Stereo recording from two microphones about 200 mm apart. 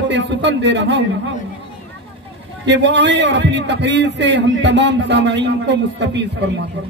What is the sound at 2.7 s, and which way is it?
A man's voice, 60° right (ahead or behind).